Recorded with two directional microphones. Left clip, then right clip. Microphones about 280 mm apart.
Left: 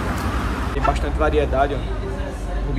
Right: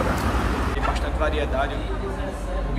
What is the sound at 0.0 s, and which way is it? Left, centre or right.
Vehicle, right.